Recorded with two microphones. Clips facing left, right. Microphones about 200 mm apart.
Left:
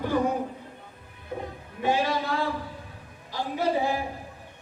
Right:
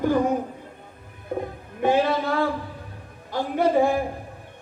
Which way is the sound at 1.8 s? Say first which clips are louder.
Right 5 dB; 55° right (ahead or behind).